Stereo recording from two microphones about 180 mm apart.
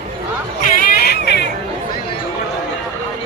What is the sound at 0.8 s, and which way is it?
Hubbub, 55° left (ahead or behind).